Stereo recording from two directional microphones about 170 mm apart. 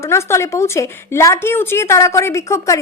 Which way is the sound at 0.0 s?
15° left (ahead or behind).